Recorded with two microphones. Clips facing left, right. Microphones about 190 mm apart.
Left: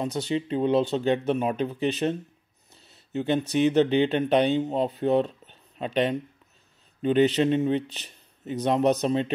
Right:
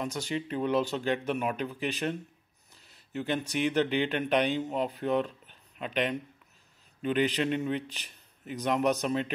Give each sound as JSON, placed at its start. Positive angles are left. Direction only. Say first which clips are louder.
{"t": 0.0, "sound": "a man's voice", "louder": "left 6 dB", "side_deg": 25}